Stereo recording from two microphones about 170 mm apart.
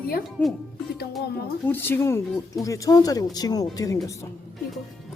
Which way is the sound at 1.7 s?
15° left (ahead or behind).